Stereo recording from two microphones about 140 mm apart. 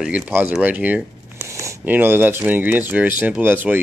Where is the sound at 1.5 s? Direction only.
20° right (ahead or behind).